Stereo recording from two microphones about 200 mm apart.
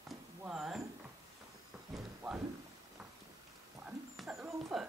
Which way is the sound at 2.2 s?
Centre (ahead or behind).